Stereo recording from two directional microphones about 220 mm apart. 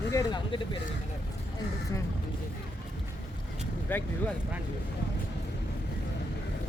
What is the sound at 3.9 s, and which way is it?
Speech, 10° left (ahead or behind).